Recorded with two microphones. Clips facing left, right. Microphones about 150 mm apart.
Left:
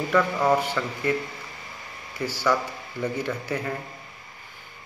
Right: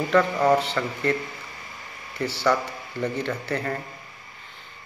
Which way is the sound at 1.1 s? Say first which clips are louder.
Even; 10° left (ahead or behind).